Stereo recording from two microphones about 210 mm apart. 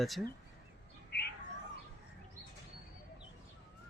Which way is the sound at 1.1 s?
50° left (ahead or behind).